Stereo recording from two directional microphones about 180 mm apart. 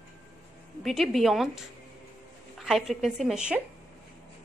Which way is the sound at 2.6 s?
Centre (ahead or behind).